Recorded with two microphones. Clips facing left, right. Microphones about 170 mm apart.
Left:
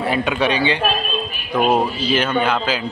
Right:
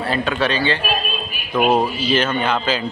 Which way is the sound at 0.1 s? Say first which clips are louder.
Even; 15° left (ahead or behind).